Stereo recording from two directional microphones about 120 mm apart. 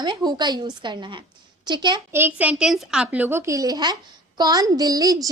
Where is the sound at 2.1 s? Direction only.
15° right (ahead or behind).